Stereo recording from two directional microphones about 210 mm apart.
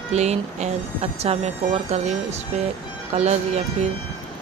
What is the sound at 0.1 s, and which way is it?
Speech, 30° right (ahead or behind).